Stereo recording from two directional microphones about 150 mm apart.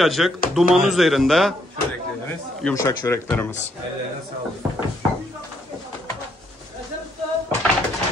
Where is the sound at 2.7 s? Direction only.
20° left (ahead or behind).